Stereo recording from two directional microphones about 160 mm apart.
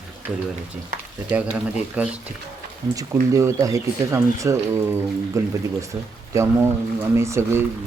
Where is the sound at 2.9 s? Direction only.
20° right (ahead or behind).